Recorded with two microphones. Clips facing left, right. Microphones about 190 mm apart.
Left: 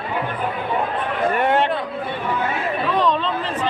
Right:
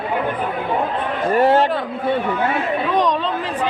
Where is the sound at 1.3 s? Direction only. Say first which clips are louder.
Right 6 dB; 35° right (ahead or behind).